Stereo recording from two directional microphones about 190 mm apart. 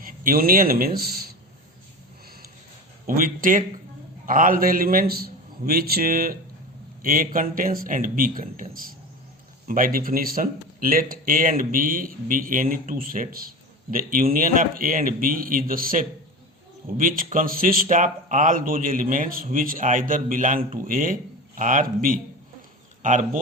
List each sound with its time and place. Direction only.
0.0 s speech: 50° right (ahead or behind)
3.1 s speech: 45° right (ahead or behind)